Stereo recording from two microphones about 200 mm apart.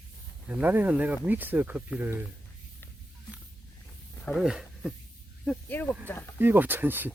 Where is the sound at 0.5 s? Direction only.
10° right (ahead or behind).